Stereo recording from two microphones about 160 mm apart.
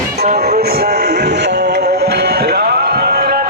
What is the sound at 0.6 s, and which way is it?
Music, 75° right (ahead or behind).